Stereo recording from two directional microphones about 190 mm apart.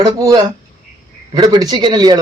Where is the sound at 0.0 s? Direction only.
20° right (ahead or behind).